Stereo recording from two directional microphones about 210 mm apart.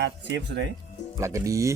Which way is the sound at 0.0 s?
60° right (ahead or behind).